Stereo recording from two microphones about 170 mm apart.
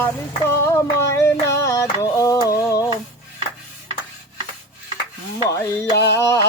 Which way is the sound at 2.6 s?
20° left (ahead or behind).